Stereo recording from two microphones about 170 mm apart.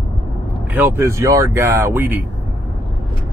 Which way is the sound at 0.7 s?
15° right (ahead or behind).